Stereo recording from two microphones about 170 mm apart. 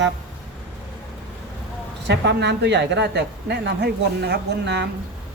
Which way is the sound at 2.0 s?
90° right.